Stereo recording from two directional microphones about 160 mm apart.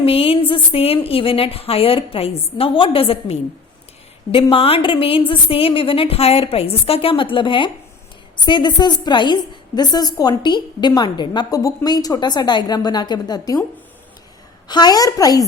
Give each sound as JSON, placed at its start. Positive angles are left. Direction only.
{"t": 0.0, "sound": "a woman's voice", "side_deg": 35}
{"t": 14.7, "sound": "a woman's voice", "side_deg": 25}